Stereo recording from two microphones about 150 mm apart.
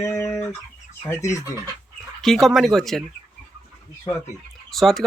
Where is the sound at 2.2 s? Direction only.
Centre (ahead or behind).